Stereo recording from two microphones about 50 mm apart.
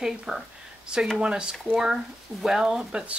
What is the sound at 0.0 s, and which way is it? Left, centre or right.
Speech, centre.